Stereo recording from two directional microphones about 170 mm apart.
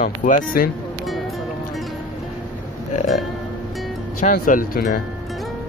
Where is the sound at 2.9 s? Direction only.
45° left (ahead or behind).